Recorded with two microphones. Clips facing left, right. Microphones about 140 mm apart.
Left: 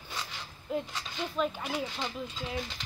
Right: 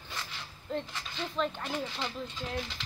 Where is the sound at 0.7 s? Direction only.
10° left (ahead or behind).